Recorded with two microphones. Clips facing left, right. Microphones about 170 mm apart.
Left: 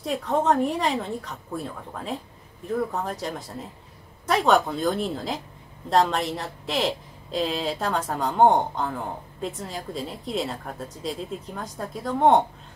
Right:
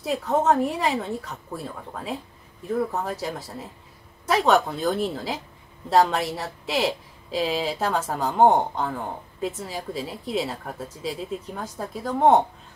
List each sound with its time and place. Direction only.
0.0 s speech: 5° right (ahead or behind)